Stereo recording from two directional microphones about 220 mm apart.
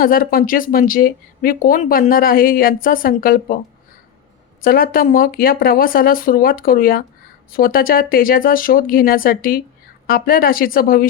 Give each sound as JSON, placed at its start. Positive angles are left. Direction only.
{"t": 0.0, "sound": "speech", "side_deg": 40}
{"t": 4.6, "sound": "speech", "side_deg": 40}